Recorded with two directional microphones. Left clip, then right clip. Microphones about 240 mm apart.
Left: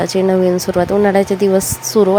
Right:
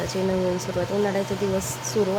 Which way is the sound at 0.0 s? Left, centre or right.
Left.